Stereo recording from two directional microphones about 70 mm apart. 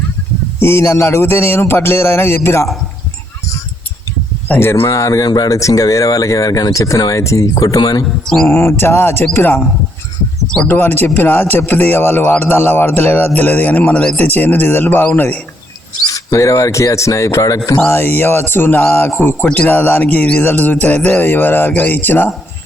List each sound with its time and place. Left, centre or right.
0.6 s a sound: left
4.6 s speech: left
5.3 s speech: left
5.5 s speech: left
8.0 s mantra: centre
8.5 s a sound: left
10.7 s speech: left; by 14.2 s centre
14.2 s speech: left
16.1 s speech: left
17.7 s a sound: left
19.5 s speech: left